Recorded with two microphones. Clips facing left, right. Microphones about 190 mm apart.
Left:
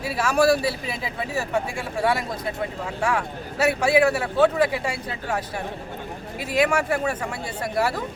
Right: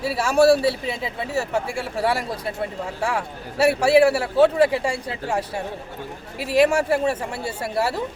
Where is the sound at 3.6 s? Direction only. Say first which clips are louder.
Right 4 dB; 30° right (ahead or behind).